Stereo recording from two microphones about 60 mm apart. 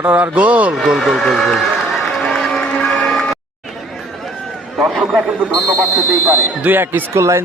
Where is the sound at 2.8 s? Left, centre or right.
Centre.